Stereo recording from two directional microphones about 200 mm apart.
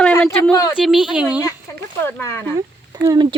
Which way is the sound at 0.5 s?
15° left (ahead or behind).